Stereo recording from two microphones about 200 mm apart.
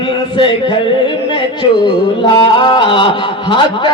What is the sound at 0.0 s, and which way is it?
Speech, 25° left (ahead or behind).